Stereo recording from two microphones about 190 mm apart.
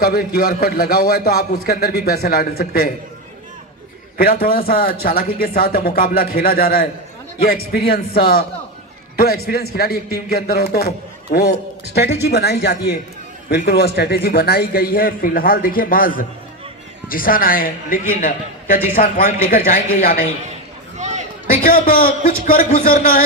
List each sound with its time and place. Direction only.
0.0 s a man's voice: 55° left (ahead or behind)
4.2 s a man's voice: 50° left (ahead or behind)
21.0 s a sound: 40° right (ahead or behind)
21.5 s a man's voice: 50° left (ahead or behind)